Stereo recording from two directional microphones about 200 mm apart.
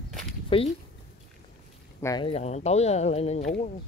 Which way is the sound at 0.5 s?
25° left (ahead or behind).